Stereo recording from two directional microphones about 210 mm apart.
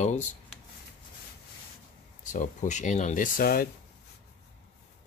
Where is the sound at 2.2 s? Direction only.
35° left (ahead or behind).